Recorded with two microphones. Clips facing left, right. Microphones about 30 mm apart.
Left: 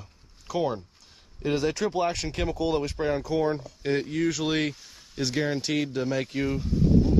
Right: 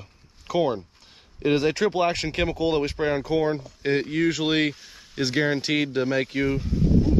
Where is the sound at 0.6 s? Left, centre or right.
Right.